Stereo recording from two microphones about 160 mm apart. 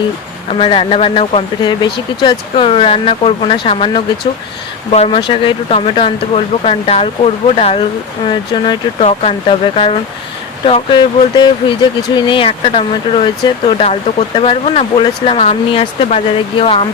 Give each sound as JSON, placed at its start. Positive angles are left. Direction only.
{"t": 0.5, "sound": "speech", "side_deg": 35}
{"t": 1.8, "sound": "speech", "side_deg": 25}